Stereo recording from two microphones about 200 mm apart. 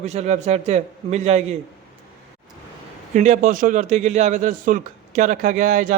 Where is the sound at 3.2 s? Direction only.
40° right (ahead or behind).